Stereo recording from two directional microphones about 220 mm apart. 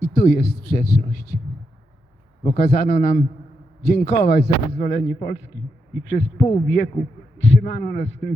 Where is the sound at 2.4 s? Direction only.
35° left (ahead or behind).